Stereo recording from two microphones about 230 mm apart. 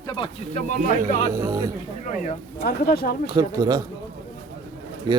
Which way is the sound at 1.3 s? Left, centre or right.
Centre.